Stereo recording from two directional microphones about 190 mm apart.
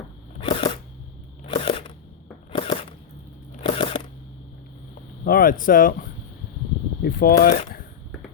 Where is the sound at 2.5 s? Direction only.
30° left (ahead or behind).